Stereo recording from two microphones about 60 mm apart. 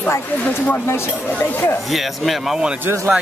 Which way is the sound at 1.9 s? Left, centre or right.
Centre.